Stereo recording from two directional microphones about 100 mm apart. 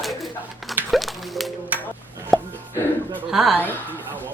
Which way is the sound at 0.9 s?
Centre (ahead or behind).